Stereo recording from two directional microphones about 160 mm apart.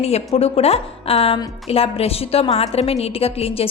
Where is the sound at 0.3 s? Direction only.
40° left (ahead or behind).